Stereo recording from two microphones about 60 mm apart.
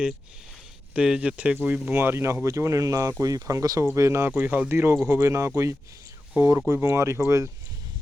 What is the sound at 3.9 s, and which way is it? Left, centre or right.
Speech, right.